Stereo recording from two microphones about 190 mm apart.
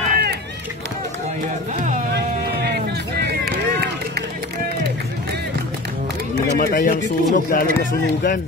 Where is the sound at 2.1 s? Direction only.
60° right (ahead or behind).